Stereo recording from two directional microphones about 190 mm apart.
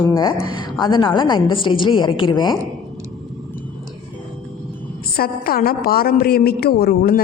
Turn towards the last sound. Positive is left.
turn(degrees=55)  # may be behind; listen again after turning